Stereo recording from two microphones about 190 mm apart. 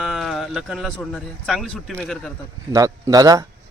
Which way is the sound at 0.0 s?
Centre (ahead or behind).